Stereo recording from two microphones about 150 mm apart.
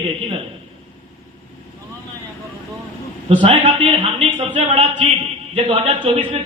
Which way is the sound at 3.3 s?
35° right (ahead or behind).